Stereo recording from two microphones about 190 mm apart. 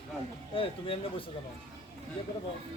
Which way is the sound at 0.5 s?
30° left (ahead or behind).